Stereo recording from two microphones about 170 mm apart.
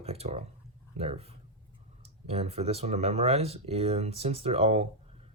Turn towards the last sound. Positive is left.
turn(degrees=-35)  # may be behind; listen again after turning